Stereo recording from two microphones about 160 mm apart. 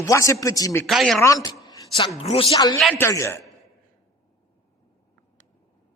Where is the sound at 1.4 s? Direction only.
20° left (ahead or behind).